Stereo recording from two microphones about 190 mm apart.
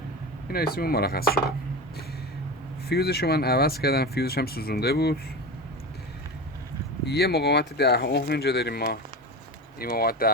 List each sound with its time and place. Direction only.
0.5 s speech: 55° left (ahead or behind)
2.9 s speech: 55° left (ahead or behind)
7.0 s speech: 60° left (ahead or behind)